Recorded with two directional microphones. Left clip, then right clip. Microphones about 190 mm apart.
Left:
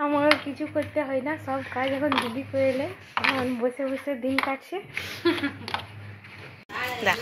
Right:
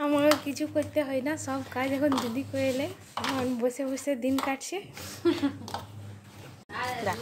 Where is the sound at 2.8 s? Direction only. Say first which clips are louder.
Left 5 dB; 10° right (ahead or behind).